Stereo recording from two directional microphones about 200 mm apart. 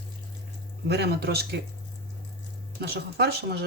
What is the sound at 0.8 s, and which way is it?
Speech, 55° right (ahead or behind).